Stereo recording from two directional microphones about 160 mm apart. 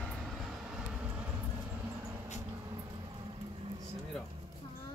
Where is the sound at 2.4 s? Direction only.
20° right (ahead or behind).